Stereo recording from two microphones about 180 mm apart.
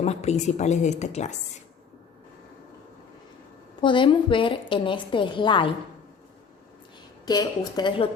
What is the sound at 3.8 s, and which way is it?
A woman's voice, 25° left (ahead or behind).